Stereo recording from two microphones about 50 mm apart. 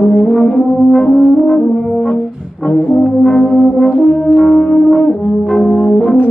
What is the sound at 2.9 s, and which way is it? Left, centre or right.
Brass instrument, centre.